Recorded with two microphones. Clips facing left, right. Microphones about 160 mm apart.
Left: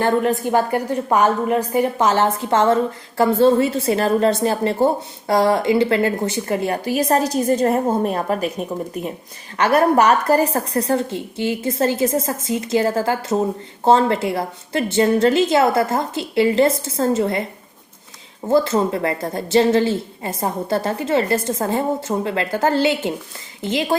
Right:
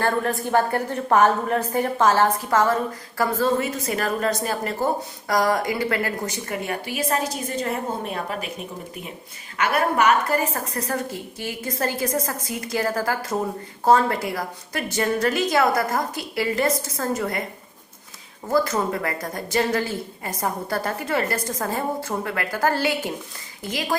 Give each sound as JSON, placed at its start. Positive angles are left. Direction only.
{"t": 0.0, "sound": "a woman's voice", "side_deg": 20}
{"t": 9.6, "sound": "a woman's voice", "side_deg": 35}
{"t": 18.4, "sound": "a woman's voice", "side_deg": 25}